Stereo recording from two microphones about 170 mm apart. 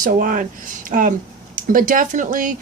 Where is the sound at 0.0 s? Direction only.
55° right (ahead or behind).